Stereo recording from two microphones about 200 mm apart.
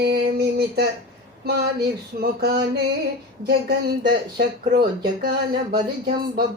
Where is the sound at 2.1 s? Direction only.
50° right (ahead or behind).